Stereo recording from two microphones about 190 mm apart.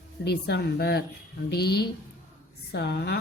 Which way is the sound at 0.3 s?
60° left (ahead or behind).